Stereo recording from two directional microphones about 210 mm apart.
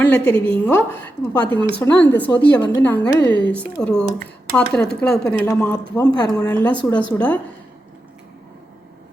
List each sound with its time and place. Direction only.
0.0 s a woman's voice: 5° left (ahead or behind)
3.8 s speech: 5° left (ahead or behind)
6.0 s a woman's voice: 20° left (ahead or behind)